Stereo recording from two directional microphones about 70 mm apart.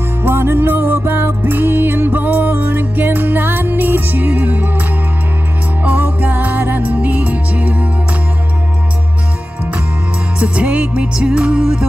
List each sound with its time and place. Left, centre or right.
0.2 s music: right
5.9 s music: right
10.4 s music: centre